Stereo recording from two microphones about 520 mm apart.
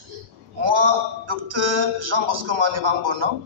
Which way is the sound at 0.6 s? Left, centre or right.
Right.